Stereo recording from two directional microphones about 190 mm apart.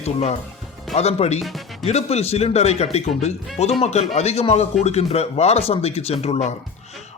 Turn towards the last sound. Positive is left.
turn(degrees=35)  # may be behind; listen again after turning